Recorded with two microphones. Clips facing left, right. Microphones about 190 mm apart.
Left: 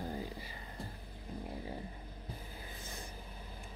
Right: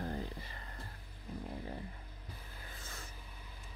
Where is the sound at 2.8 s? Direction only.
15° left (ahead or behind).